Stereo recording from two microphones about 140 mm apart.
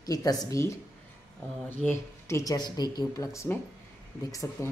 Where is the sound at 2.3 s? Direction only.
25° left (ahead or behind).